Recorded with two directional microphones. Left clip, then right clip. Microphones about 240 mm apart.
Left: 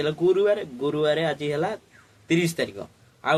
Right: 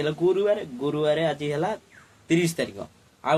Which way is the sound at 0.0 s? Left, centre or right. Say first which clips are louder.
Left 2 dB; centre.